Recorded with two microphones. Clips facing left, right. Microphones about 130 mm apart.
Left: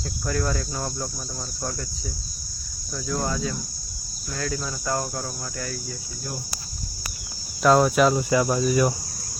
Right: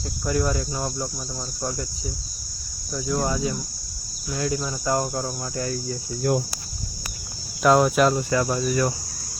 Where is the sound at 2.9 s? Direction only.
10° right (ahead or behind); by 6.0 s 30° right (ahead or behind).